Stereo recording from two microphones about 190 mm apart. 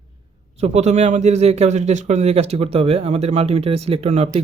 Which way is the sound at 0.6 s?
35° right (ahead or behind).